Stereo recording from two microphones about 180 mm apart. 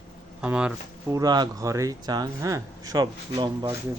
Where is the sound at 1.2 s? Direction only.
25° right (ahead or behind).